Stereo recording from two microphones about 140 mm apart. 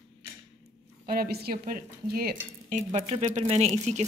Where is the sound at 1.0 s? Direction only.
90° right.